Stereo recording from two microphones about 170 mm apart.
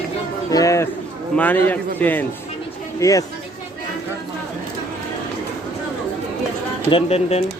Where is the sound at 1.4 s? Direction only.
10° left (ahead or behind).